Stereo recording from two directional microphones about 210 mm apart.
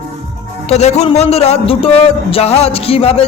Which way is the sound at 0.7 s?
30° left (ahead or behind).